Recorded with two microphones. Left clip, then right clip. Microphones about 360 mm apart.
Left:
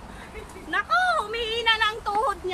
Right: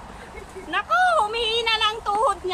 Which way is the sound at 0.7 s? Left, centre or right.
Centre.